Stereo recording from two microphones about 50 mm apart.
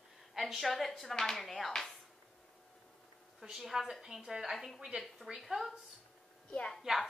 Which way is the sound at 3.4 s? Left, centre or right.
Centre.